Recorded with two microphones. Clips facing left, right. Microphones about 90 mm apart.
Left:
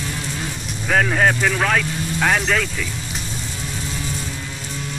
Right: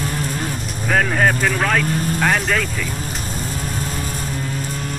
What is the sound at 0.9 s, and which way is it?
Speech, centre (ahead or behind).